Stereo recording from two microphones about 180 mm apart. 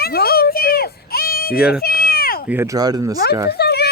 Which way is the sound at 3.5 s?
65° left (ahead or behind).